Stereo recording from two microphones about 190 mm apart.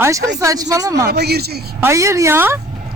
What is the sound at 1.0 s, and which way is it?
Speech, 60° right (ahead or behind).